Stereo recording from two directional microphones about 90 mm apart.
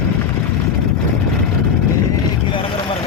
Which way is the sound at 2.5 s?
75° left (ahead or behind).